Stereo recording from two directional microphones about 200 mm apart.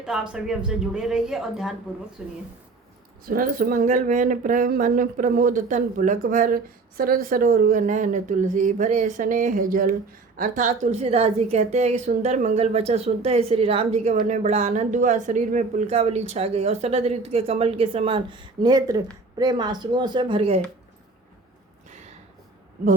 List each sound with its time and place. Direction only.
0.0 s a woman's voice: 5° right (ahead or behind)
3.2 s a woman's voice: 45° right (ahead or behind); by 20.6 s 25° right (ahead or behind)